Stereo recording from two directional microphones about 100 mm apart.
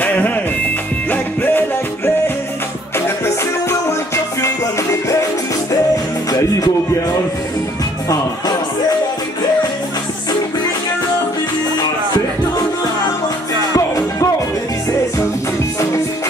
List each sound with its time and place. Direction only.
0.0 s music: 15° left (ahead or behind)
13.7 s music: 35° left (ahead or behind)